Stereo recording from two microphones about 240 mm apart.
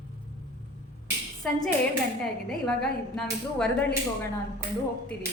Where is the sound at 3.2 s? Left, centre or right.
Centre.